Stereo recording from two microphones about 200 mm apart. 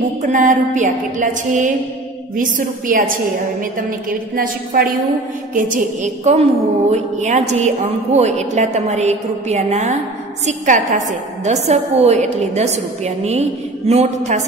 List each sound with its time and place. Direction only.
0.3 s a woman's voice: 40° right (ahead or behind)